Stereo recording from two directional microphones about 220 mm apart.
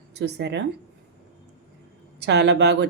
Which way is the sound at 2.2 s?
50° right (ahead or behind).